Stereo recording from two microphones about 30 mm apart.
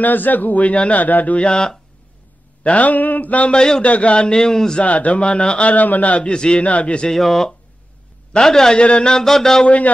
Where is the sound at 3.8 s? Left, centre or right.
Left.